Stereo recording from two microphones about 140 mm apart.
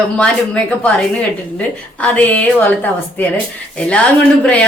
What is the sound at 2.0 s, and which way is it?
Speech, 10° left (ahead or behind).